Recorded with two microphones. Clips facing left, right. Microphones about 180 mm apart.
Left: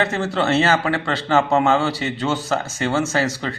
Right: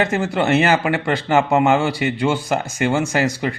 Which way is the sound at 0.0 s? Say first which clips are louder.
Right 2 dB; 15° right (ahead or behind).